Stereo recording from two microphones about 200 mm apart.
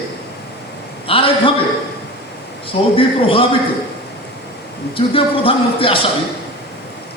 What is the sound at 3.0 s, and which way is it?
Speech, 25° left (ahead or behind).